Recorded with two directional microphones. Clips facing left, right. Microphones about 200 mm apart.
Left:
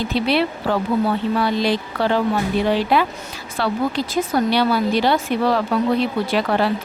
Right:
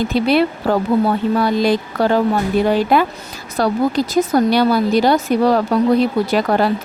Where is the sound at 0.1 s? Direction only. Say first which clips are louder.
Right 3 dB; 45° right (ahead or behind).